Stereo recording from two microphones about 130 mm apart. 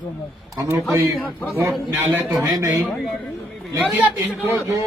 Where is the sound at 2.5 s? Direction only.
25° right (ahead or behind).